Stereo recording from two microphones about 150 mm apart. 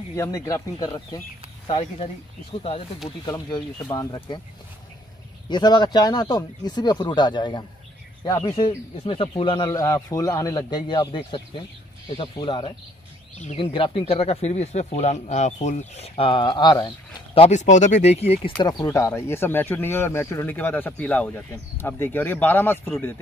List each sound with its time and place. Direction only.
0.1 s speech: 20° left (ahead or behind)
3.3 s speech: 30° left (ahead or behind)
5.5 s speech: 30° left (ahead or behind)
9.7 s speech: 20° left (ahead or behind); by 18.5 s 45° left (ahead or behind)
18.6 s speech: 25° left (ahead or behind)